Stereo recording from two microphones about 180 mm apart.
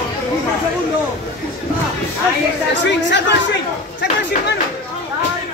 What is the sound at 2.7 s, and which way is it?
Speech, 75° left (ahead or behind).